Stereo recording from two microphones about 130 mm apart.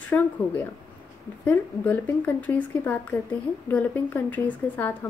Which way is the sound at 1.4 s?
15° left (ahead or behind).